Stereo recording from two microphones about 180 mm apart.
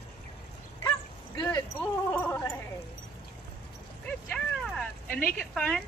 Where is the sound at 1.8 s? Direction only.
10° left (ahead or behind).